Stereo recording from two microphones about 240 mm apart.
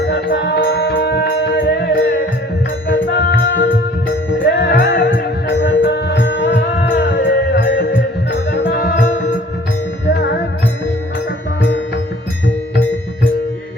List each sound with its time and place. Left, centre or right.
0.1 s music: left
6.8 s music: left